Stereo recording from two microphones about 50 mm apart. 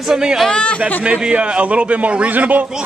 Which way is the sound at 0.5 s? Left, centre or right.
Left.